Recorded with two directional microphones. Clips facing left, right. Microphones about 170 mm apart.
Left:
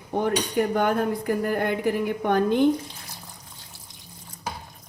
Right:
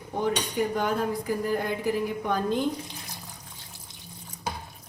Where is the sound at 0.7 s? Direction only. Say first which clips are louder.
Left 4 dB; 60° left (ahead or behind).